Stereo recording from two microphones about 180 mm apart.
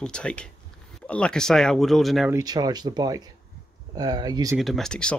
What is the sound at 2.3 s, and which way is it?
Speech, 20° right (ahead or behind).